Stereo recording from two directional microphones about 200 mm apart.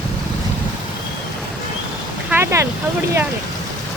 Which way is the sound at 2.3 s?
10° right (ahead or behind).